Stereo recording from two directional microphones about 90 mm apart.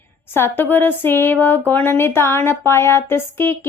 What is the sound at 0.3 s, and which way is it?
Speech, 25° left (ahead or behind).